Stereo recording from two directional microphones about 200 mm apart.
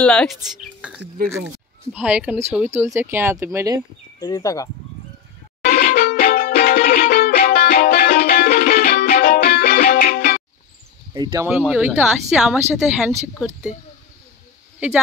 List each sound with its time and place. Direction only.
0.0 s speech: 5° left (ahead or behind); by 3.8 s 15° right (ahead or behind)
4.2 s speech: 15° left (ahead or behind)
5.6 s music: 50° left (ahead or behind)
11.4 s speech: 5° right (ahead or behind)